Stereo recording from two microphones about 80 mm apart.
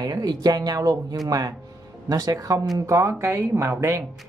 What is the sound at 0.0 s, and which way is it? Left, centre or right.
Speech, right.